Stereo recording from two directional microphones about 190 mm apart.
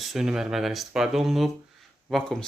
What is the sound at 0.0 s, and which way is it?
Speech, centre (ahead or behind).